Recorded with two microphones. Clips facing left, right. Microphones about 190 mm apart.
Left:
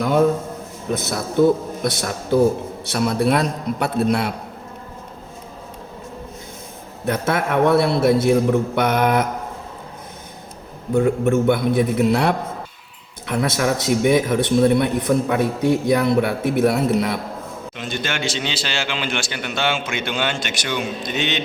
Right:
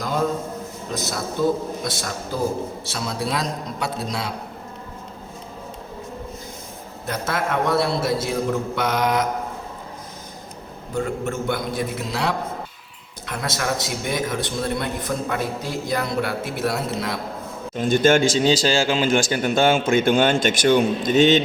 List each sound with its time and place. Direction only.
0.9 s a man's voice: 55° left (ahead or behind)
7.1 s a man's voice: 55° left (ahead or behind)
10.9 s a man's voice: 60° left (ahead or behind)
17.7 s a man's voice: 45° right (ahead or behind)